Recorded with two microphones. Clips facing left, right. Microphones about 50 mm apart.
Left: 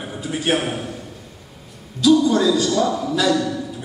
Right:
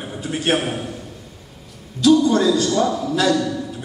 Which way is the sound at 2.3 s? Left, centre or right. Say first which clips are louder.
Even; right.